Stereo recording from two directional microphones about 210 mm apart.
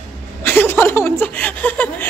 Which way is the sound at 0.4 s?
10° left (ahead or behind).